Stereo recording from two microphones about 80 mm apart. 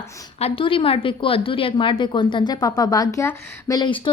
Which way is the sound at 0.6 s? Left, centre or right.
Left.